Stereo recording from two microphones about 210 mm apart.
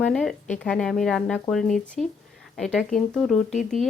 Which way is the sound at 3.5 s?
35° left (ahead or behind).